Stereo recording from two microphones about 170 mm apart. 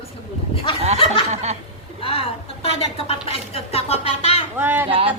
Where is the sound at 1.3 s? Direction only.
40° right (ahead or behind).